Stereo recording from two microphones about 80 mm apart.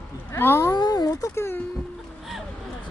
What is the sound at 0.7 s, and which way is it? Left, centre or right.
Speech, left.